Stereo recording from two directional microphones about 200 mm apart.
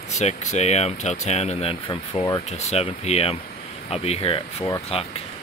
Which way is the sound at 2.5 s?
35° left (ahead or behind).